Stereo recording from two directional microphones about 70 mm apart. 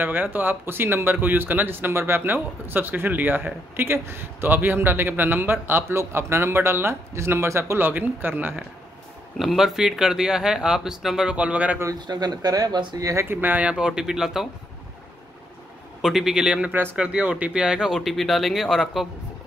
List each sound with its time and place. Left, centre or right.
0.0 s speech: right
7.9 s speech: right
9.4 s speech: centre
11.3 s speech: centre
11.9 s speech: right
13.0 s speech: right
13.3 s speech: right; by 14.5 s centre
16.0 s speech: centre